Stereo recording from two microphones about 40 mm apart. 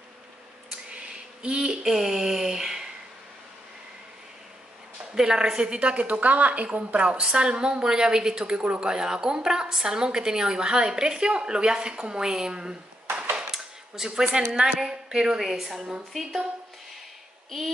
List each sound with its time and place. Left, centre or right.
0.7 s a sound: right
5.1 s a woman's voice: centre
5.8 s a woman's voice: right
13.5 s a sound: centre
14.8 s a woman's voice: centre
15.4 s a woman's voice: centre